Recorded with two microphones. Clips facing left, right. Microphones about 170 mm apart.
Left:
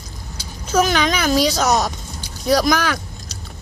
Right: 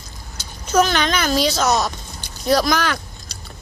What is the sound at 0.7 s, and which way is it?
A woman's voice, 10° left (ahead or behind).